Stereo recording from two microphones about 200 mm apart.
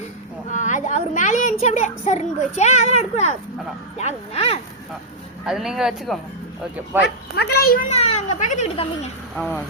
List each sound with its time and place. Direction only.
0.5 s a sound: 40° left (ahead or behind)
1.6 s a child's voice: 35° left (ahead or behind)
5.5 s speech: centre (ahead or behind)
7.3 s a child's voice: 50° left (ahead or behind); by 8.9 s 30° left (ahead or behind)
9.3 s speech: centre (ahead or behind)